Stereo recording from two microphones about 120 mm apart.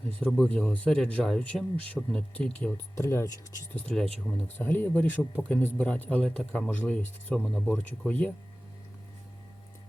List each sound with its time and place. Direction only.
0.2 s speech: 5° left (ahead or behind)
2.9 s speech: 25° left (ahead or behind)
3.8 s speech: 10° left (ahead or behind)